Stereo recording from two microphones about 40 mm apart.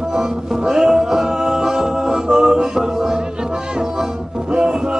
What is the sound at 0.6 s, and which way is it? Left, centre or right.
Music, centre.